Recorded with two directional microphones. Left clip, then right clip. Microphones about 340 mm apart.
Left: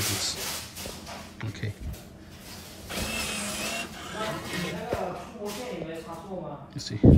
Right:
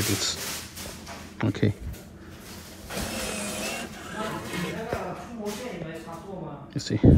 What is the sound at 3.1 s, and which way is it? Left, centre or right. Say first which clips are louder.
Music: left 1 dB; centre.